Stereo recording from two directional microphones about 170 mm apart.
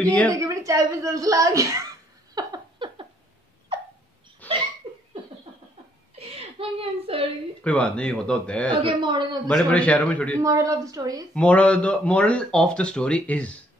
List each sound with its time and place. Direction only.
0.0 s speech: 10° left (ahead or behind)
0.4 s speech: 20° right (ahead or behind)
2.3 s a sound: 25° right (ahead or behind)
4.4 s hiccup: 10° left (ahead or behind)
6.1 s whimper: 35° right (ahead or behind)
7.6 s speech: 5° left (ahead or behind)
8.7 s speech: 30° right (ahead or behind)
9.5 s speech: 5° left (ahead or behind)
10.4 s speech: 20° right (ahead or behind)
11.3 s speech: 5° left (ahead or behind)